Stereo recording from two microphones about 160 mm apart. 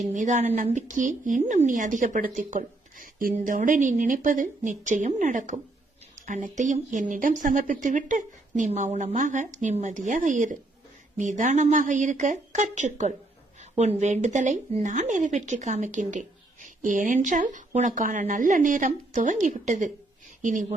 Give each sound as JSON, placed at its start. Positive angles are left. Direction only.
{"t": 0.0, "sound": "speech", "side_deg": -50}